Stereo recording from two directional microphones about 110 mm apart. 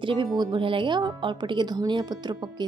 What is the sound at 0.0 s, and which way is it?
A woman's voice, 50° right (ahead or behind).